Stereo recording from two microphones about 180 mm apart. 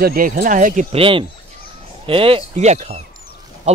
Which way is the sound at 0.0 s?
55° right (ahead or behind).